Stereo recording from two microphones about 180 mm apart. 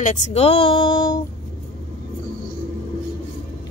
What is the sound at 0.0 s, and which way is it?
Speech, 40° left (ahead or behind).